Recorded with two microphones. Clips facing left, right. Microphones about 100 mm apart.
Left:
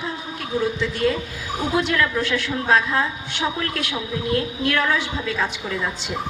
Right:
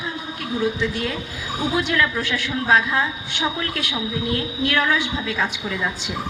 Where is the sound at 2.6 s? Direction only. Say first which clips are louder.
Right 1 dB; 15° right (ahead or behind).